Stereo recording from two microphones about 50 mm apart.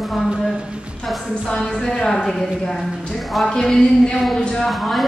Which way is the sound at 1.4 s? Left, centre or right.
Centre.